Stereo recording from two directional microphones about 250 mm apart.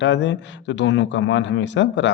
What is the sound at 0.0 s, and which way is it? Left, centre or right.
Speech, left.